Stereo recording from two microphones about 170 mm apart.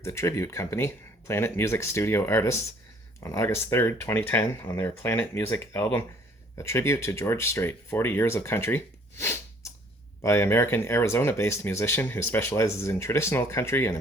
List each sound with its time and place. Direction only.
0.0 s speech: 15° left (ahead or behind)